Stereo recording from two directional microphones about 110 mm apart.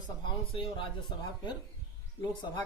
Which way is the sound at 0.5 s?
55° left (ahead or behind).